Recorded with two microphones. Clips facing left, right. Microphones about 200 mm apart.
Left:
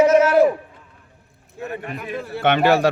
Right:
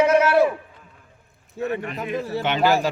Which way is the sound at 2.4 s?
65° left (ahead or behind).